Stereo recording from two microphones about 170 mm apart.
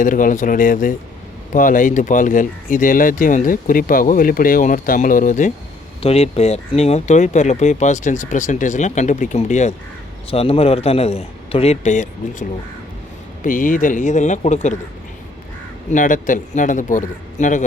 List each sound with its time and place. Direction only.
0.0 s speech: 50° left (ahead or behind)
6.0 s a man's voice: 35° left (ahead or behind)
15.9 s speech: 50° left (ahead or behind)